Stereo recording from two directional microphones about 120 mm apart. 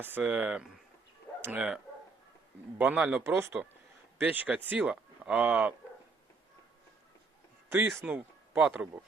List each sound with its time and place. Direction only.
0.2 s speech: 10° right (ahead or behind)
2.7 s speech: 15° right (ahead or behind)
7.7 s speech: 15° right (ahead or behind)